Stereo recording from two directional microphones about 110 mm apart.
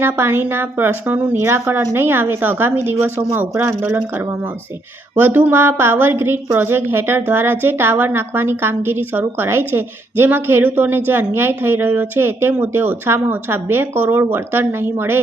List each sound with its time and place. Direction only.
0.0 s a woman's voice: 20° right (ahead or behind)